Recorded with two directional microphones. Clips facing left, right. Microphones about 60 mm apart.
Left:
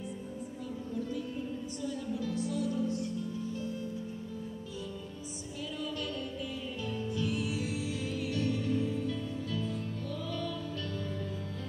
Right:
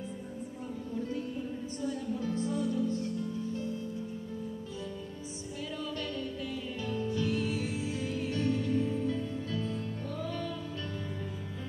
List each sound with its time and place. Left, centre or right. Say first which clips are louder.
1.8 s music: right 2 dB; right
6.8 s music: right 2 dB; right